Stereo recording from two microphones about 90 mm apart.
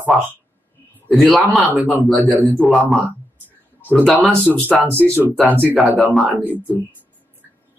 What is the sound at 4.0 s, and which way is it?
Speech, 5° right (ahead or behind).